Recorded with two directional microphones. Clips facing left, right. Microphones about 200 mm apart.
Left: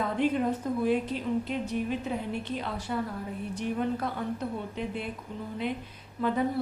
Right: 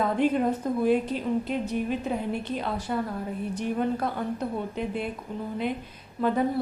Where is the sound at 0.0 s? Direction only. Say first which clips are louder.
Right 3 dB; 45° right (ahead or behind).